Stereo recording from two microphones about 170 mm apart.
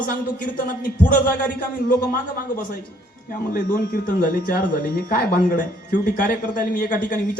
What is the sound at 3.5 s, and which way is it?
Speech, 55° left (ahead or behind).